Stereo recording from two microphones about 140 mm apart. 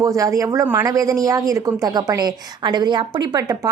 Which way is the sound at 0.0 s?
25° right (ahead or behind).